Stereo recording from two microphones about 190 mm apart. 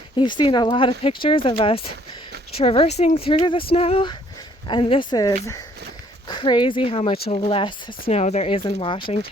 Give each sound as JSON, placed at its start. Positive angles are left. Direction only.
{"t": 0.2, "sound": "speech", "side_deg": 25}